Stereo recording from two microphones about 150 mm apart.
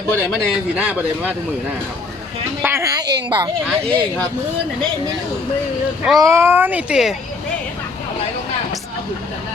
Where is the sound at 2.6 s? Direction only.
20° right (ahead or behind).